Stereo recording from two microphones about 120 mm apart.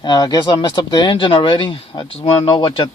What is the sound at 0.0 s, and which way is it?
Speech, 35° left (ahead or behind).